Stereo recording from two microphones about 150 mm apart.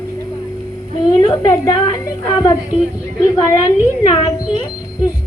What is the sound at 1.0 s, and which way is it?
A woman's voice, 25° left (ahead or behind).